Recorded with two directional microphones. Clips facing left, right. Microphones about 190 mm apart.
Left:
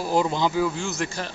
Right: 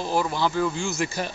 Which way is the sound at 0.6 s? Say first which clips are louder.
Even; centre (ahead or behind).